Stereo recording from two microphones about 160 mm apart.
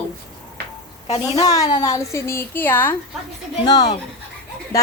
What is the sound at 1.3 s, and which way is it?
A woman's voice, 20° left (ahead or behind).